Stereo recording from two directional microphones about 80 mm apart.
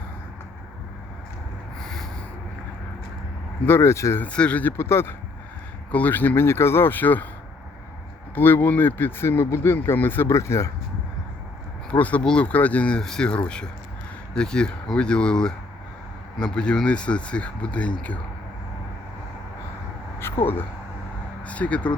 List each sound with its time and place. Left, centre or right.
1.8 s rub: centre
3.7 s speech: left
4.2 s speech: centre
4.8 s speech: left
8.4 s speech: left
10.3 s speech: left
11.9 s speech: centre
20.1 s speech: left
21.4 s speech: centre